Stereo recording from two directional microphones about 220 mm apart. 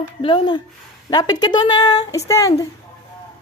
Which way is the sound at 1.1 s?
20° left (ahead or behind).